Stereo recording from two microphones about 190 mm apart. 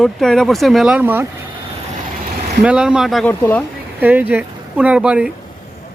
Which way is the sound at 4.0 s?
10° right (ahead or behind).